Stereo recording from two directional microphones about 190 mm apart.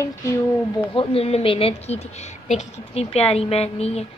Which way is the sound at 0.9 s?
30° left (ahead or behind).